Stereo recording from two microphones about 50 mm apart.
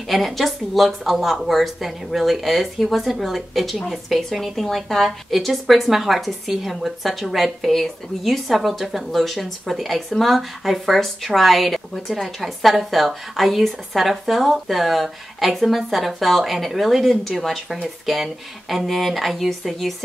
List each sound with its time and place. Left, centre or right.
0.1 s speech: centre